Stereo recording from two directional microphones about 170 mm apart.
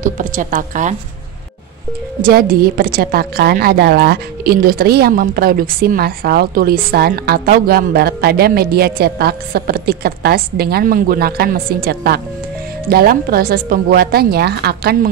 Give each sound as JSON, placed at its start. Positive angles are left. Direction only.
{"t": 0.0, "sound": "speech", "side_deg": -50}
{"t": 2.2, "sound": "a woman's voice", "side_deg": -60}